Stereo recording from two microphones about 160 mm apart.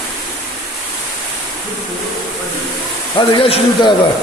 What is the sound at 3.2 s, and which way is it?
Speech, 30° left (ahead or behind).